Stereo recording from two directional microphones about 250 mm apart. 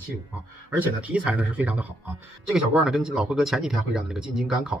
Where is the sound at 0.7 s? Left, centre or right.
Centre.